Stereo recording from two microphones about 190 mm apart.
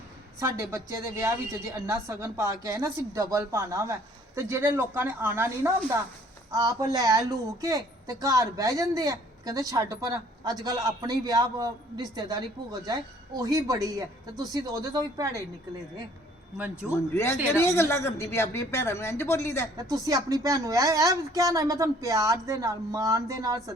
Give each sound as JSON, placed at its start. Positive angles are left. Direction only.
{"t": 0.3, "sound": "a woman's voice", "side_deg": -15}
{"t": 16.9, "sound": "a woman's voice", "side_deg": 15}
{"t": 19.7, "sound": "speech", "side_deg": -20}